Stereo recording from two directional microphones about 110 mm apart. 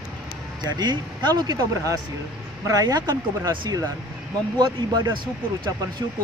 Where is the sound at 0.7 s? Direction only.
40° right (ahead or behind).